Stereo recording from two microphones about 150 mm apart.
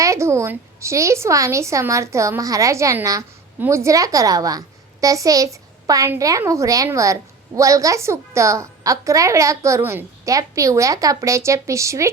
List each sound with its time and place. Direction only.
0.0 s a woman's voice: 20° right (ahead or behind)